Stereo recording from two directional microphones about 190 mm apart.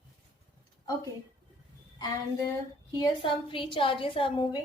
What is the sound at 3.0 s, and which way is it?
A woman's voice, 25° left (ahead or behind).